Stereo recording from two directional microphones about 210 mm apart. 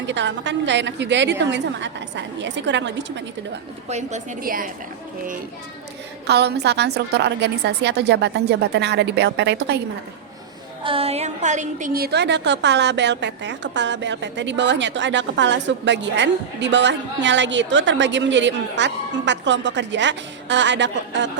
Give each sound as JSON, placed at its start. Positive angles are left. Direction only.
{"t": 0.0, "sound": "a woman's voice", "side_deg": -60}
{"t": 3.8, "sound": "a woman's voice", "side_deg": -35}
{"t": 6.2, "sound": "a woman's voice", "side_deg": -50}
{"t": 10.8, "sound": "a woman's voice", "side_deg": -25}